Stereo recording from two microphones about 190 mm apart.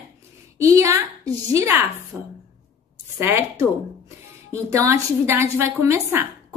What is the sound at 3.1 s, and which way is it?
Speech, 15° right (ahead or behind).